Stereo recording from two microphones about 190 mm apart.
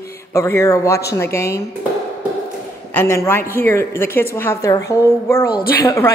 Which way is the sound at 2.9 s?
15° left (ahead or behind).